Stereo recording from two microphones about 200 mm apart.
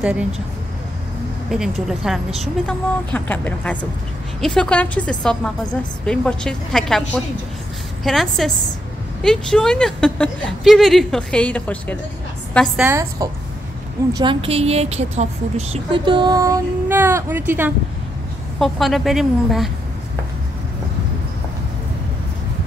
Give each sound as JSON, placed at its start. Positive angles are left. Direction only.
{"t": 0.0, "sound": "a woman's voice", "side_deg": -5}
{"t": 1.5, "sound": "a woman's voice", "side_deg": 0}
{"t": 12.8, "sound": "a woman's voice", "side_deg": -15}
{"t": 14.1, "sound": "a woman's voice", "side_deg": -25}
{"t": 18.6, "sound": "a woman's voice", "side_deg": 0}